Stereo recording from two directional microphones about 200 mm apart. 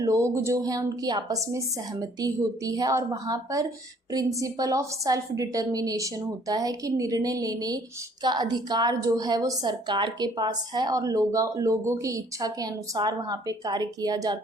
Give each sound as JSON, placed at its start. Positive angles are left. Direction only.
{"t": 0.0, "sound": "a woman's voice", "side_deg": -15}